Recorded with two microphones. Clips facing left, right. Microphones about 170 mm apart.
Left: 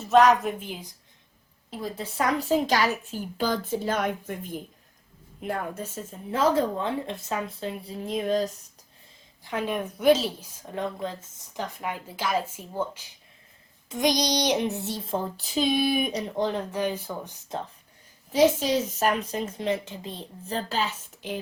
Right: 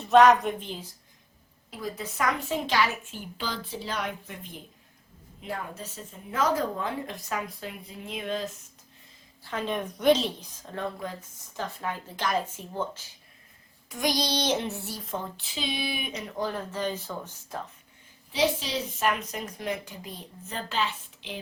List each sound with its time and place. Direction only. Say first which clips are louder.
0.0 s a woman's voice: even; centre (ahead or behind)
1.7 s a woman's voice: left 2 dB; 30° left (ahead or behind); by 6.1 s 50° left (ahead or behind)
6.3 s child singing: left 4 dB; 30° left (ahead or behind)
9.4 s a woman's voice: left 2 dB; 10° left (ahead or behind)
13.9 s child singing: left 4 dB; 20° left (ahead or behind); by 16.3 s 35° left (ahead or behind)
16.4 s a woman's voice: left 3 dB; 20° left (ahead or behind)
18.3 s a woman's voice: left 6 dB; 45° left (ahead or behind)